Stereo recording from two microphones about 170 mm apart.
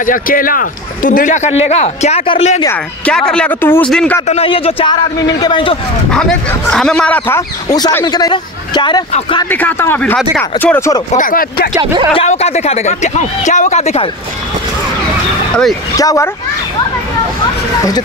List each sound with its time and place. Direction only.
0.0 s speech: 55° left (ahead or behind); by 2.6 s 35° left (ahead or behind)
3.1 s speech: 5° left (ahead or behind)
4.3 s speech: 35° left (ahead or behind)
6.1 s a man's voice: 5° left (ahead or behind); by 9.0 s 25° left (ahead or behind)
9.5 s a man's voice: 10° left (ahead or behind)
11.1 s speech: 50° left (ahead or behind)
11.7 s speech: 25° right (ahead or behind)
12.1 s speech: 35° left (ahead or behind)
16.0 s speech: 20° left (ahead or behind)